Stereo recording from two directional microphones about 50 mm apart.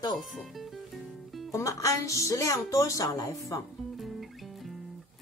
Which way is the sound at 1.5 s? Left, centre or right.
Left.